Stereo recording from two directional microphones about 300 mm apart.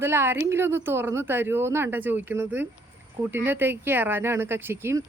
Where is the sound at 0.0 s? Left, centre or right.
Centre.